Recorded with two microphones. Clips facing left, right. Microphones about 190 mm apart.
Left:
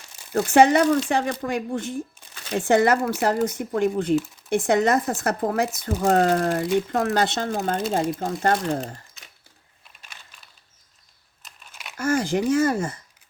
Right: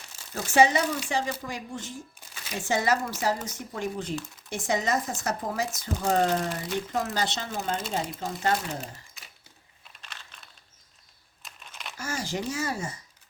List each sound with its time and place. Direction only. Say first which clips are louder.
0.3 s speech: left 6 dB; 60° left (ahead or behind)
8.8 s crumpling: left 7 dB; 5° right (ahead or behind)
10.0 s a sound: right 1 dB; 10° left (ahead or behind)
11.9 s speech: left 10 dB; 55° left (ahead or behind)